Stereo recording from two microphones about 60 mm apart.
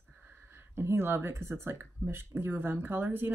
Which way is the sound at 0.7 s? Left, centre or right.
Right.